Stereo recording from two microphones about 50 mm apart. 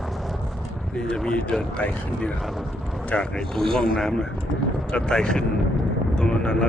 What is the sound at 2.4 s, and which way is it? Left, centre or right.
Speech, centre.